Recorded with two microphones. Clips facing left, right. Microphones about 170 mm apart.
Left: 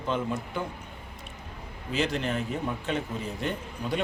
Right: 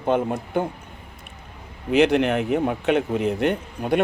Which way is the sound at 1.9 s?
65° right (ahead or behind).